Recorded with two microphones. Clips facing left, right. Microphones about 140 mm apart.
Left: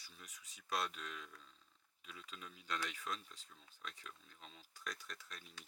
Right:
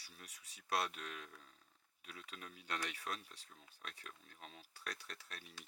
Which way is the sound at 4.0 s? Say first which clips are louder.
Right 1 dB; 50° right (ahead or behind).